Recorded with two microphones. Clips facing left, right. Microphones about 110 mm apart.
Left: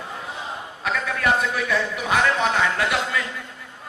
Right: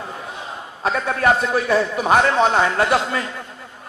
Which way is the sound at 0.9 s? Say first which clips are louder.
Right 5 dB; 35° right (ahead or behind).